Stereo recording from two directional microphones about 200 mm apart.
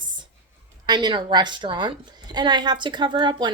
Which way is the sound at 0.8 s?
20° right (ahead or behind).